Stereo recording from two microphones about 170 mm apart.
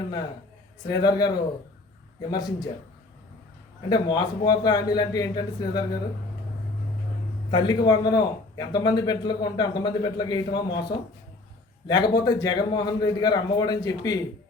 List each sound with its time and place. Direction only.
0.9 s a man's voice: 20° left (ahead or behind)
2.3 s a man's voice: 25° left (ahead or behind)
3.8 s a man's voice: 25° left (ahead or behind)
7.5 s a man's voice: 25° left (ahead or behind)